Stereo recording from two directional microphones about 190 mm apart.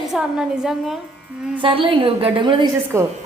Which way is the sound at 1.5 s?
25° right (ahead or behind).